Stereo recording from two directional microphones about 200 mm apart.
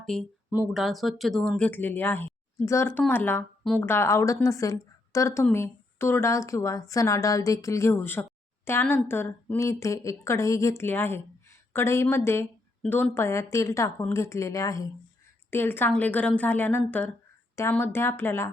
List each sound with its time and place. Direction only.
0.0 s a woman's voice: centre (ahead or behind)